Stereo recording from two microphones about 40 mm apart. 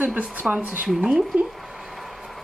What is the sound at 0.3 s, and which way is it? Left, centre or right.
Speech, right.